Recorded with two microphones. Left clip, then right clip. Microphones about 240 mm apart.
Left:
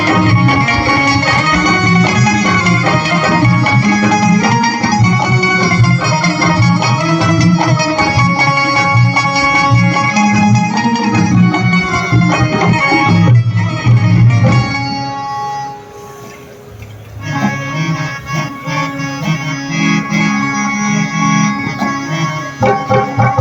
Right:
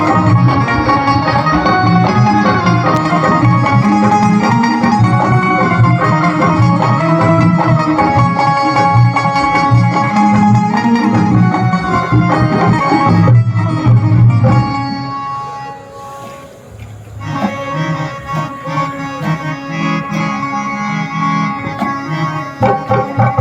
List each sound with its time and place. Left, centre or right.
0.0 s music: right
17.4 s music: right